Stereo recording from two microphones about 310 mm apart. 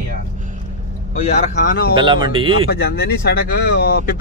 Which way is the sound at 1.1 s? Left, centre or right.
Left.